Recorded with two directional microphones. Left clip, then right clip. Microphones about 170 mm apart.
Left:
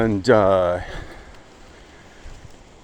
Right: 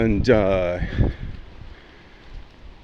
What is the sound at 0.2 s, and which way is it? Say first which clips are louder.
Speech: left 4 dB; 25° right (ahead or behind).